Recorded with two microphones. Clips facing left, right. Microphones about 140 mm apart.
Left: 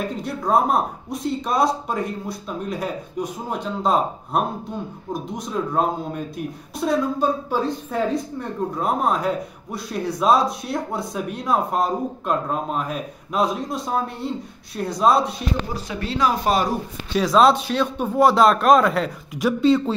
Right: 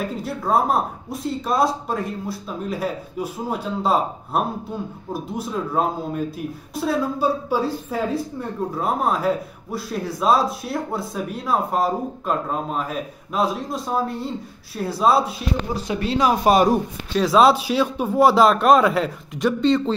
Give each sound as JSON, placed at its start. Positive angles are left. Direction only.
{"t": 0.2, "sound": "speech", "side_deg": 0}
{"t": 16.0, "sound": "speech", "side_deg": -15}
{"t": 17.1, "sound": "speech", "side_deg": 0}